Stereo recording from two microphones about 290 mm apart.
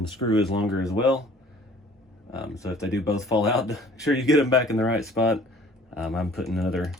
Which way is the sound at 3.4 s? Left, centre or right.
Centre.